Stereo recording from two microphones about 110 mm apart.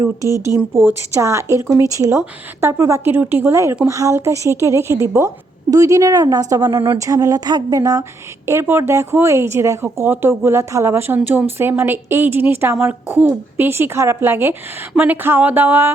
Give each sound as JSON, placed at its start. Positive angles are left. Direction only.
{"t": 0.2, "sound": "speech", "side_deg": 30}
{"t": 0.4, "sound": "speech", "side_deg": -25}
{"t": 8.4, "sound": "speech", "side_deg": -25}
{"t": 14.9, "sound": "a sound", "side_deg": -15}